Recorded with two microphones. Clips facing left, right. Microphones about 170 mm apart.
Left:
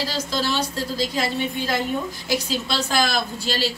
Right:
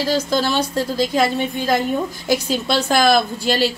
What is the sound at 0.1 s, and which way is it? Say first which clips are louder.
A woman's voice: right 6 dB; 50° right (ahead or behind).